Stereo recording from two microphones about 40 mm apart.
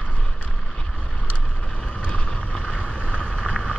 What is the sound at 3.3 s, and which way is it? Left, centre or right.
Vehicle, centre.